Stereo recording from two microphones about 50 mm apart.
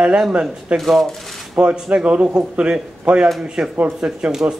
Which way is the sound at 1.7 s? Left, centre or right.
Centre.